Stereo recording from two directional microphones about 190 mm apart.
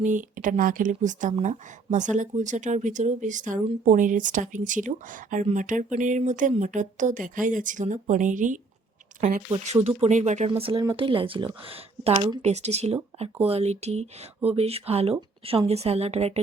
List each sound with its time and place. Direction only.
0.0 s speech: 40° right (ahead or behind)
10.6 s speech: 25° right (ahead or behind)